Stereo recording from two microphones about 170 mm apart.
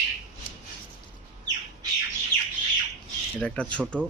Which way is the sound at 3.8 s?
10° right (ahead or behind).